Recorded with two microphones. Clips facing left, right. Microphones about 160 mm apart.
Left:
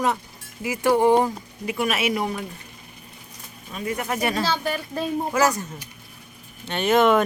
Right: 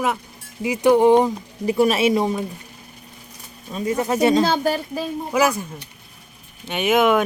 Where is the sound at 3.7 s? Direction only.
30° right (ahead or behind).